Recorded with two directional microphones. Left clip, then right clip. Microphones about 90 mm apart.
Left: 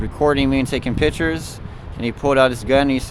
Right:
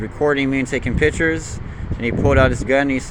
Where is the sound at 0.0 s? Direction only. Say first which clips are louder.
Left 1 dB; 55° left (ahead or behind).